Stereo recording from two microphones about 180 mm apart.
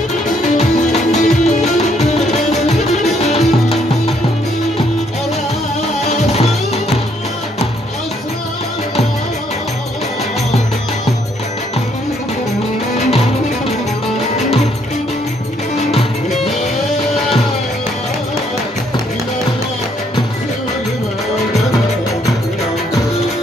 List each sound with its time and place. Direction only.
0.6 s music: 40° left (ahead or behind)
6.1 s music: 35° left (ahead or behind)